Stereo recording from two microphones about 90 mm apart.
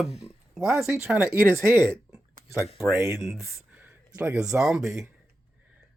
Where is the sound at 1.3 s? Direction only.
30° right (ahead or behind).